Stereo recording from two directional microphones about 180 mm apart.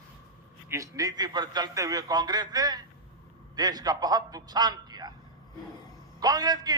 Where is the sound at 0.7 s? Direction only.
20° right (ahead or behind).